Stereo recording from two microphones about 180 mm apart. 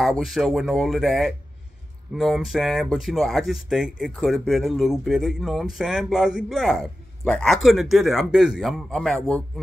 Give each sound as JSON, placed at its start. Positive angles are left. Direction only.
{"t": 0.0, "sound": "a man's voice", "side_deg": 0}